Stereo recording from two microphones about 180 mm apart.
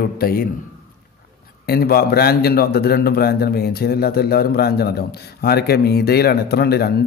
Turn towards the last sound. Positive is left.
turn(degrees=60)  # may be behind; listen again after turning